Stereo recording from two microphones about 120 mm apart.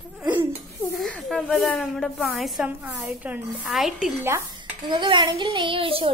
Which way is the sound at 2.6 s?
15° right (ahead or behind).